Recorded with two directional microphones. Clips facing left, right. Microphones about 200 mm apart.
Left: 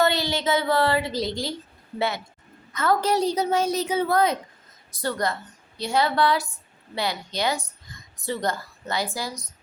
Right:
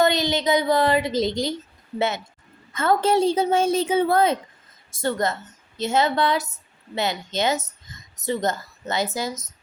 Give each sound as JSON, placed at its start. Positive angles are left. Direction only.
{"t": 0.0, "sound": "a woman's voice", "side_deg": -20}